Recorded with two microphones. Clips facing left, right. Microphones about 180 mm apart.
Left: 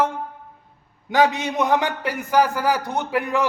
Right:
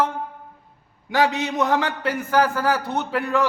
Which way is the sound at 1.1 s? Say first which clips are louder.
Left 2 dB; 20° left (ahead or behind).